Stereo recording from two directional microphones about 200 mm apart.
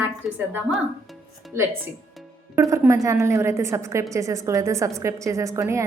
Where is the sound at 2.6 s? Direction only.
15° right (ahead or behind).